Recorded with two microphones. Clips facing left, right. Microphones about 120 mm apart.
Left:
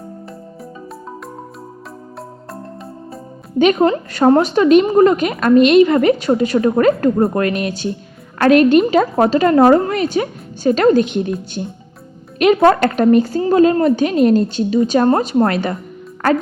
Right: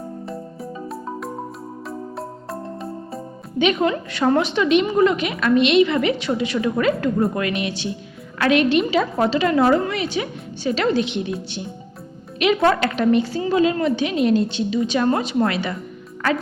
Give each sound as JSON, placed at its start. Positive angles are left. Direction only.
{"t": 0.3, "sound": "music", "side_deg": 0}
{"t": 3.6, "sound": "a woman's voice", "side_deg": 40}
{"t": 12.6, "sound": "a woman's voice", "side_deg": 45}